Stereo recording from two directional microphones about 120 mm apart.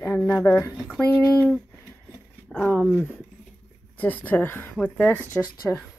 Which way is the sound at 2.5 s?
10° left (ahead or behind).